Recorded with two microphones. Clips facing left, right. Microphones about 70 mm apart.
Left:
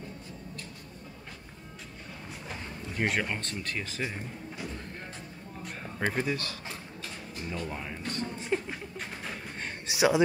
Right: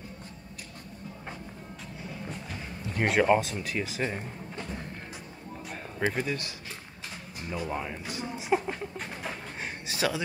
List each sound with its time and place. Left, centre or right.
3.0 s speech: centre
6.0 s speech: centre
7.4 s speech: centre
9.8 s speech: centre